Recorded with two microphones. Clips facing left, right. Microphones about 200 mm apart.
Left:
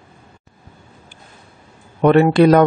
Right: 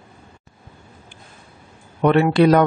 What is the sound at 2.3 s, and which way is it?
Speech, 50° left (ahead or behind).